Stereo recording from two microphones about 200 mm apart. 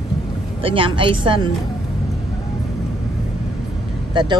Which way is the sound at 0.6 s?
25° right (ahead or behind).